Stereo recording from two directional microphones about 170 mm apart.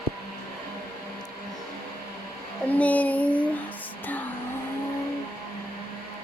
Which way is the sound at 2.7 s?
10° left (ahead or behind).